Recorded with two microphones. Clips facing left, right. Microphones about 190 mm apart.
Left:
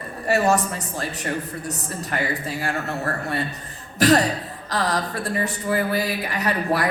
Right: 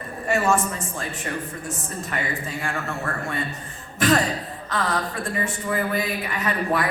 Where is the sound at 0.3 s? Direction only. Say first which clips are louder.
Left 2 dB; 40° left (ahead or behind).